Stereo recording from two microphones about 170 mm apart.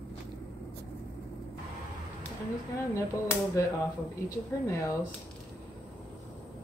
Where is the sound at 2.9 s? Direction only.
15° left (ahead or behind).